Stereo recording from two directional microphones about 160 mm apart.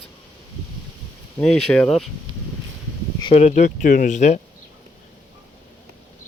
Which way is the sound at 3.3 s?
45° left (ahead or behind).